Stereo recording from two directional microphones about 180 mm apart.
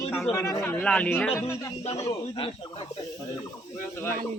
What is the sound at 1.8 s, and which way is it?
Speech, 35° left (ahead or behind).